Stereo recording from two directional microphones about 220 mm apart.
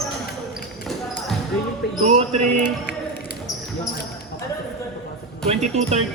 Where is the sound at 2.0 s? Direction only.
30° right (ahead or behind).